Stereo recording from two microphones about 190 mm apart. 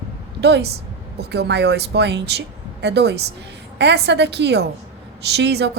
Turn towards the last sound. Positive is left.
turn(degrees=-60)  # may be behind; listen again after turning